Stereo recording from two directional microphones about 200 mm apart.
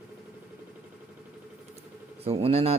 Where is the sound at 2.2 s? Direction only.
30° right (ahead or behind).